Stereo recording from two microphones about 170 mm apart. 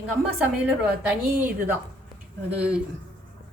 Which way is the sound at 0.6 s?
10° right (ahead or behind).